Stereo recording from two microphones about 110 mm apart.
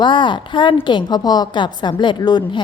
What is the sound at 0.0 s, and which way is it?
A woman's voice, 45° left (ahead or behind).